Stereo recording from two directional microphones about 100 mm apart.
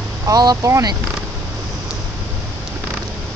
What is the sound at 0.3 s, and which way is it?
Speech, 40° right (ahead or behind).